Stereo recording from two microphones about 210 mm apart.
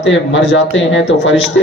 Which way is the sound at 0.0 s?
60° left (ahead or behind).